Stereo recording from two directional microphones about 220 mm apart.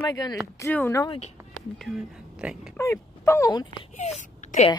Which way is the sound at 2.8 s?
10° left (ahead or behind).